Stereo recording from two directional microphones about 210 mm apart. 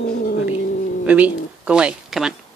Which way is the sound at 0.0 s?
45° left (ahead or behind).